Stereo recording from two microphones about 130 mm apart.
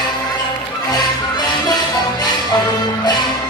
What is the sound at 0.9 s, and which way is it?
Music, 30° left (ahead or behind).